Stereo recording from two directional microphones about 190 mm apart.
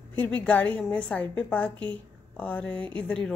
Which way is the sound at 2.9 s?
5° left (ahead or behind).